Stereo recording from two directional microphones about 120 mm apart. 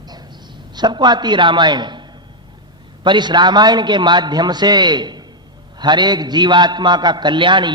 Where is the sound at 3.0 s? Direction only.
40° right (ahead or behind).